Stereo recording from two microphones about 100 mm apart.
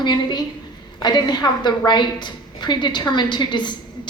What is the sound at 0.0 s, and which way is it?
A woman's voice, 50° left (ahead or behind).